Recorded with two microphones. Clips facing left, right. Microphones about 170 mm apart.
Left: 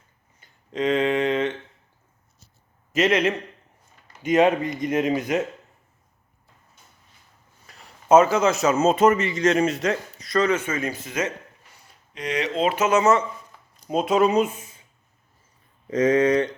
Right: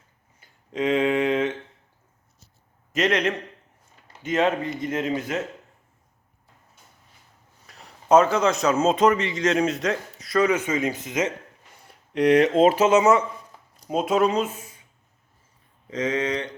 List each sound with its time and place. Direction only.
0.3 s a sound: 5° right (ahead or behind)
2.9 s a man's voice: 5° left (ahead or behind)
4.2 s speech: 15° left (ahead or behind)
7.7 s a man's voice: centre (ahead or behind); by 11.3 s 20° right (ahead or behind)
11.9 s speech: 60° right (ahead or behind); by 12.9 s 40° right (ahead or behind)
12.9 s speech: 15° right (ahead or behind)
13.8 s speech: 5° right (ahead or behind); by 14.8 s 20° left (ahead or behind)
15.9 s speech: 45° left (ahead or behind)